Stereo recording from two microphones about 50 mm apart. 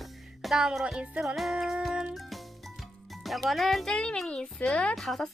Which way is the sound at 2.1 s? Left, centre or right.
Centre.